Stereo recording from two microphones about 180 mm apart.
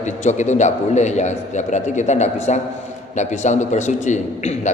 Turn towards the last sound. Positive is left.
turn(degrees=40)  # may be behind; listen again after turning